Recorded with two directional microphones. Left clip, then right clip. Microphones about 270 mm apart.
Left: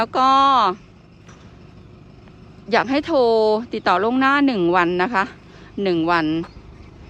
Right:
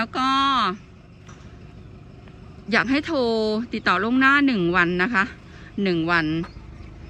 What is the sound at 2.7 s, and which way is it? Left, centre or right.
A woman's voice, centre.